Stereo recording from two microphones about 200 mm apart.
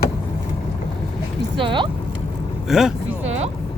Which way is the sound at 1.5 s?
25° right (ahead or behind).